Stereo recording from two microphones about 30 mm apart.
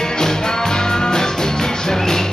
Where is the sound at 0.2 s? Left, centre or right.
Centre.